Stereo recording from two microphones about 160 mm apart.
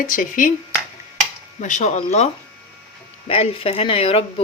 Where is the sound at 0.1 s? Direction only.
55° left (ahead or behind).